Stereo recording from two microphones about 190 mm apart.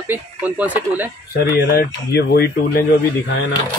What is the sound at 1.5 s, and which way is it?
Speech, 55° left (ahead or behind).